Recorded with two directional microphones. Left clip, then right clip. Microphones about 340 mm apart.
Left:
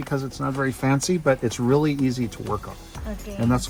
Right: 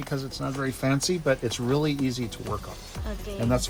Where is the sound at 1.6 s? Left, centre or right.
Left.